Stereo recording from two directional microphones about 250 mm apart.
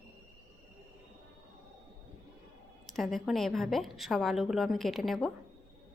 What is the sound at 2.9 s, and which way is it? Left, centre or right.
A woman's voice, centre.